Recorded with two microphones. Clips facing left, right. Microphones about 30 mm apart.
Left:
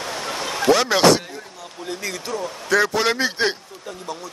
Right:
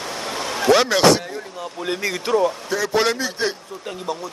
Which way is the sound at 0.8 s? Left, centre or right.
Centre.